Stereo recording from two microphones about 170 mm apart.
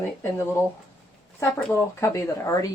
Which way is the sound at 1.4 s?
15° left (ahead or behind).